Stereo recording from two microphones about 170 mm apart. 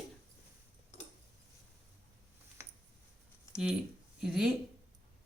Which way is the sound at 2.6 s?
15° right (ahead or behind).